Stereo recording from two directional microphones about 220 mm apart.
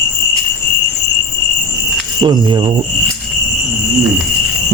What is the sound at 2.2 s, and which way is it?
Cricket, 20° right (ahead or behind).